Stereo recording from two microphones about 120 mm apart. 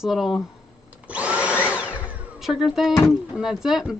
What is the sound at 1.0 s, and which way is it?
Vacuum cleaner, 10° right (ahead or behind).